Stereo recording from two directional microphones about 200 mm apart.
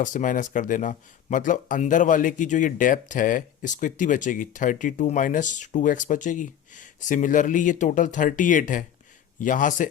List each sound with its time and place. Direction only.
0.0 s speech: 40° left (ahead or behind)